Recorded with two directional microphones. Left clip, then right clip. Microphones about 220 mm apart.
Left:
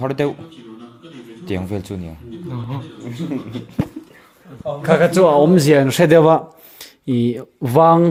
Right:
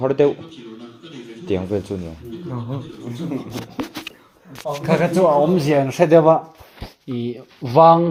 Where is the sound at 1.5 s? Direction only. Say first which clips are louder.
Right 3 dB; 50° left (ahead or behind).